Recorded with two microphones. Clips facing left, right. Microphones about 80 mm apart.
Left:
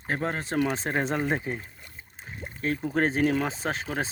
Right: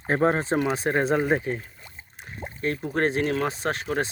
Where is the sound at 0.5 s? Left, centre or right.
Centre.